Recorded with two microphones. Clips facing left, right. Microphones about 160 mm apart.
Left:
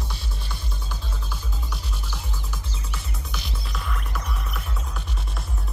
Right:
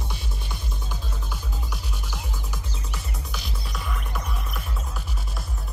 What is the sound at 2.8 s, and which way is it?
Music, centre (ahead or behind).